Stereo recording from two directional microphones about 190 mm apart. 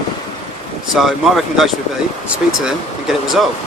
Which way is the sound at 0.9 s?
Centre (ahead or behind).